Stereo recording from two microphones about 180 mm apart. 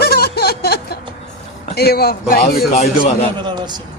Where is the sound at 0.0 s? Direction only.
60° left (ahead or behind).